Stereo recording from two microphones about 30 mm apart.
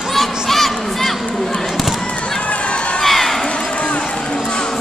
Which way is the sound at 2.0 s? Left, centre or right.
Left.